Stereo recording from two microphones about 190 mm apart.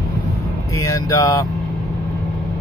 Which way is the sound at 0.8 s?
15° left (ahead or behind).